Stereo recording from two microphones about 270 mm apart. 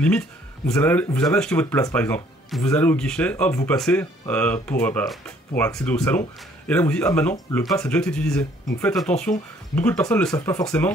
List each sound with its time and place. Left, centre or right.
0.0 s speech: centre